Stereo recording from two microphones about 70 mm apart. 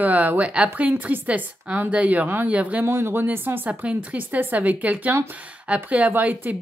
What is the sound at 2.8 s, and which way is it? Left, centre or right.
A woman's voice, right.